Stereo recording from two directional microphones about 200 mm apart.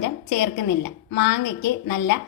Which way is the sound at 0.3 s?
65° left (ahead or behind).